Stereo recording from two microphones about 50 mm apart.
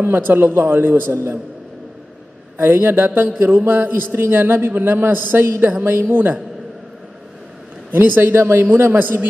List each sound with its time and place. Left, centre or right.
0.0 s a man's voice: right
1.1 s a man's voice: right
2.5 s a man's voice: right
7.9 s a man's voice: right